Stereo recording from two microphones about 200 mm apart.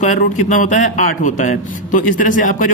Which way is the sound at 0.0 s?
40° left (ahead or behind).